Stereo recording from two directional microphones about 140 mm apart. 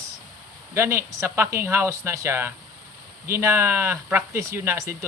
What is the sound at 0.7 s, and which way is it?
Speech, 15° right (ahead or behind).